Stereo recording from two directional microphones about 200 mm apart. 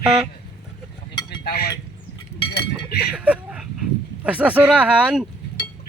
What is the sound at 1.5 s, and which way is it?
Speech, 50° left (ahead or behind).